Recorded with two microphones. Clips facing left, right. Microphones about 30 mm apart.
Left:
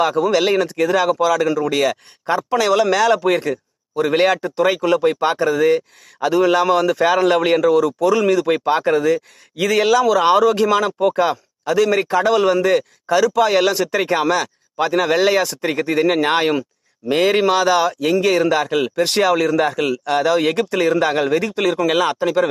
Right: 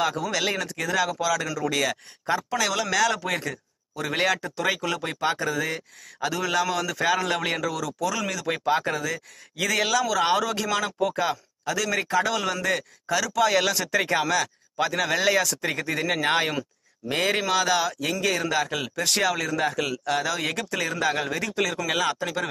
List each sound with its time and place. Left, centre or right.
0.0 s a man's voice: left
9.8 s a man's voice: left
17.3 s speech: left